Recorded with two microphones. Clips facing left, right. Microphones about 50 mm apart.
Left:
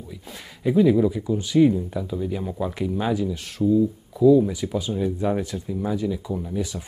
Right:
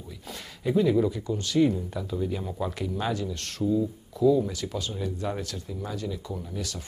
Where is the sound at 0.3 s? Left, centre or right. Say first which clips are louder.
Left 3 dB; centre.